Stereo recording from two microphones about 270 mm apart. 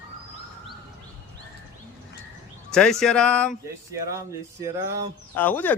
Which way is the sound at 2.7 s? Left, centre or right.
Centre.